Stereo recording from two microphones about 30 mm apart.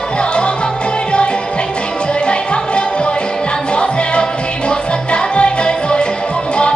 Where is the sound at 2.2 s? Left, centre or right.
Left.